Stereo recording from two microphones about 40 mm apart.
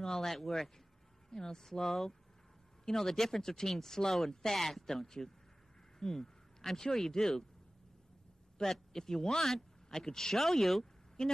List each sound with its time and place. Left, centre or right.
0.0 s speech: centre
1.3 s speech: centre
8.7 s speech: centre
10.3 s speech: centre